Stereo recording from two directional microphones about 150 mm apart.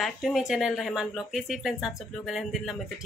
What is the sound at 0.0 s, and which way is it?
Speech, centre (ahead or behind).